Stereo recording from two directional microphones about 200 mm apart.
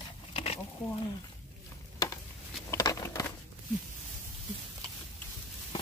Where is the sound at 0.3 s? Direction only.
30° left (ahead or behind).